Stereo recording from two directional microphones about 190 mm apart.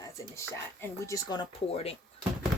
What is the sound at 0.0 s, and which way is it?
Speech, 15° left (ahead or behind).